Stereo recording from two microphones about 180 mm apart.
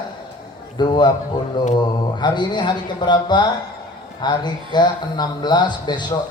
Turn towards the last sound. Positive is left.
turn(degrees=25)  # may be behind; listen again after turning